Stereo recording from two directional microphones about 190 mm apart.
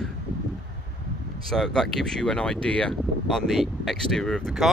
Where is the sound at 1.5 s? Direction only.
5° left (ahead or behind).